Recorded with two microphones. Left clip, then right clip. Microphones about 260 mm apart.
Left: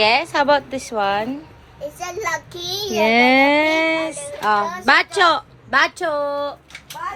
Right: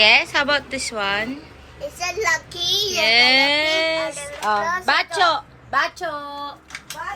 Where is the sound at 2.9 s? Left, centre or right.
Centre.